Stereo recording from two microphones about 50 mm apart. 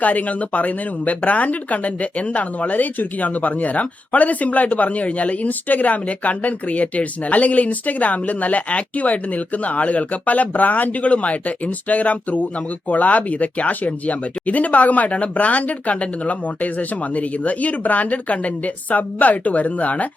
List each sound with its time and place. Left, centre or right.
0.0 s speech: left